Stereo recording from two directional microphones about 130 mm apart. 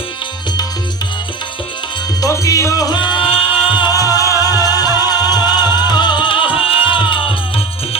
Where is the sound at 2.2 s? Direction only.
25° left (ahead or behind).